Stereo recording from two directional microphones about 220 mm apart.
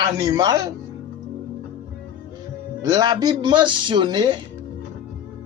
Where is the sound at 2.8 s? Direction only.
15° right (ahead or behind).